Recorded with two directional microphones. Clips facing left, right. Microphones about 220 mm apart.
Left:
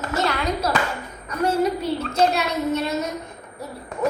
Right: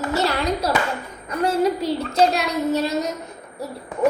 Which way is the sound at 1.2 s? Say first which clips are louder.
Right 1 dB; 30° right (ahead or behind).